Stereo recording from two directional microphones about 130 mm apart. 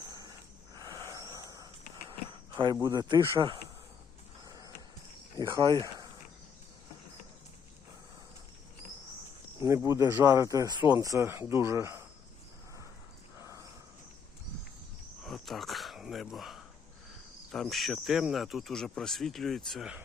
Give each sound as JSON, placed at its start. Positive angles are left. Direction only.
{"t": 0.8, "sound": "wheeze", "side_deg": -30}
{"t": 2.8, "sound": "speech", "side_deg": -30}
{"t": 4.4, "sound": "wild animals", "side_deg": -30}
{"t": 5.4, "sound": "speech", "side_deg": -30}
{"t": 9.6, "sound": "speech", "side_deg": -20}
{"t": 13.4, "sound": "a sound", "side_deg": -25}
{"t": 15.2, "sound": "a sound", "side_deg": 0}
{"t": 17.5, "sound": "speech", "side_deg": 0}